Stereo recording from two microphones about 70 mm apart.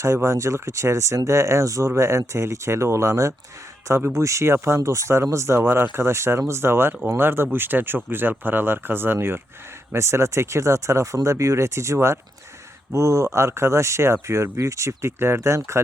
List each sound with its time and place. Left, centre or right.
0.0 s speech: right